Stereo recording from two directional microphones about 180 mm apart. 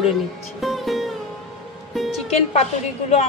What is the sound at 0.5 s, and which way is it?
Music, centre (ahead or behind).